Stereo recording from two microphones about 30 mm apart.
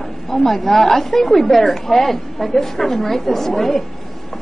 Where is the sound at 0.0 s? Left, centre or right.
Centre.